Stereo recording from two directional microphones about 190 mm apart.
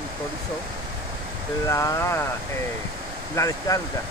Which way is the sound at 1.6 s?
15° left (ahead or behind).